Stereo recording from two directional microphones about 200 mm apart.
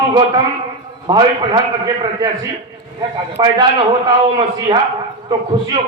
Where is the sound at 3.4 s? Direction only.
20° right (ahead or behind).